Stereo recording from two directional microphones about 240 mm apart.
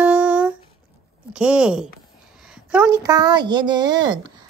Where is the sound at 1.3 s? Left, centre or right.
Centre.